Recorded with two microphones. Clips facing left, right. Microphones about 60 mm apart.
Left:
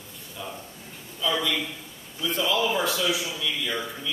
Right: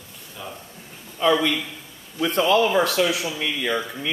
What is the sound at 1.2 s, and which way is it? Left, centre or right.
Speech, right.